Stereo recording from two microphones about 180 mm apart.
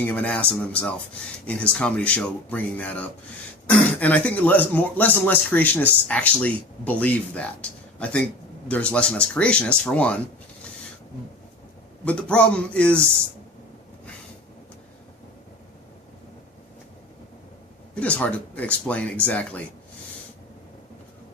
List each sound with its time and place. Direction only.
0.1 s speech: 10° left (ahead or behind)
12.0 s speech: 5° left (ahead or behind)
18.0 s speech: 10° left (ahead or behind)